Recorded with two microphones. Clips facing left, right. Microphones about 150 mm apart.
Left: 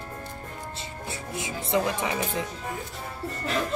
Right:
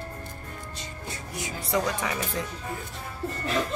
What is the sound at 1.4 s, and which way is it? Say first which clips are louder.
Speech: left 2 dB; 25° left (ahead or behind).